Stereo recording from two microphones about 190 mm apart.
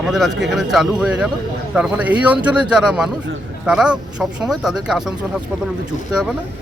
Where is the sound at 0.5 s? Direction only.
Centre (ahead or behind).